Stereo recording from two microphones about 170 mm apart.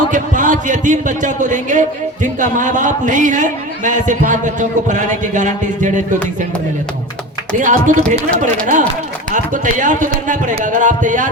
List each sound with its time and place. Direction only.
0.1 s a man's voice: 50° right (ahead or behind)
7.6 s a man's voice: 50° right (ahead or behind)